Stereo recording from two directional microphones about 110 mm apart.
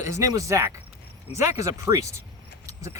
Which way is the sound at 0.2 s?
30° right (ahead or behind).